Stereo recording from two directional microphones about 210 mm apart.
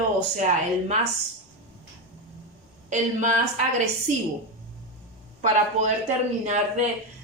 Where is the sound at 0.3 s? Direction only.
35° right (ahead or behind).